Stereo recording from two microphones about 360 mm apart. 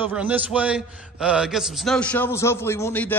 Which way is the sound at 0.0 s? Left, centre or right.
Centre.